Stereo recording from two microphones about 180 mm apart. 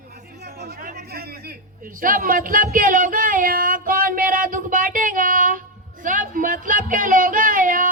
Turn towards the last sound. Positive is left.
turn(degrees=-50)  # may be behind; listen again after turning